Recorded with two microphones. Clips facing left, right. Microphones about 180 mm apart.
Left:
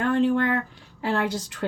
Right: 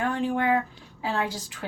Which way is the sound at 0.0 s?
65° left (ahead or behind).